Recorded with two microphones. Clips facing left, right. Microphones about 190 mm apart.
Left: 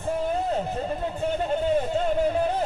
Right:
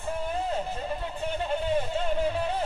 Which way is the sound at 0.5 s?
40° left (ahead or behind).